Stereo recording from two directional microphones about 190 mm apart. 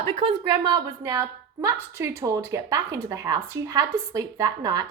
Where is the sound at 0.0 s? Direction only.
30° right (ahead or behind).